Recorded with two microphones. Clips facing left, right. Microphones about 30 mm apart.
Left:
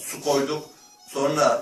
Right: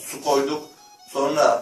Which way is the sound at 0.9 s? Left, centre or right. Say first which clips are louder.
Right 2 dB; centre.